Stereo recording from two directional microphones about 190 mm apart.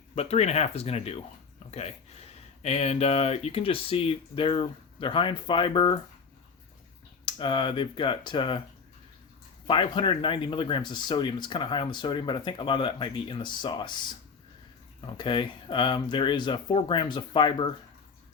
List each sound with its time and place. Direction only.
0.2 s speech: 35° left (ahead or behind)
2.6 s speech: 35° left (ahead or behind)
7.3 s speech: 25° left (ahead or behind)
9.6 s speech: 25° left (ahead or behind)
15.0 s speech: 25° left (ahead or behind)